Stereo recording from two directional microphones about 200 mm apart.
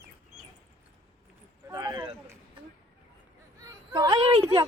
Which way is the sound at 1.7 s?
20° right (ahead or behind).